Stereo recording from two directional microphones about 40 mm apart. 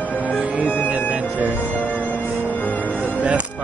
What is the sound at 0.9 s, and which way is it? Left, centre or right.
Music, right.